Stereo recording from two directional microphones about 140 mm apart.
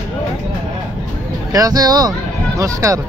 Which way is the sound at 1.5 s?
25° right (ahead or behind).